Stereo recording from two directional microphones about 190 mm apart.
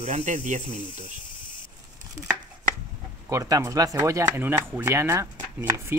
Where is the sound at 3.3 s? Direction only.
15° right (ahead or behind).